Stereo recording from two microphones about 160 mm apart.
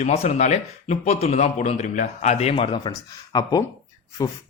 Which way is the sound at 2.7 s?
25° left (ahead or behind).